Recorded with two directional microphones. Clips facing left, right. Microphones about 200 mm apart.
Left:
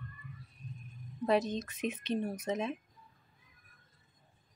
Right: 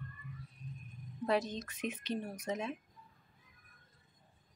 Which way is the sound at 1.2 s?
20° left (ahead or behind).